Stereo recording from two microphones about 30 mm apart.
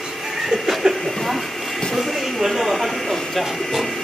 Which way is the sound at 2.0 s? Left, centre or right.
Centre.